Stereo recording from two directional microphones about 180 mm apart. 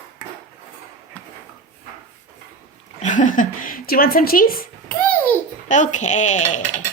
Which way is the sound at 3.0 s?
45° left (ahead or behind).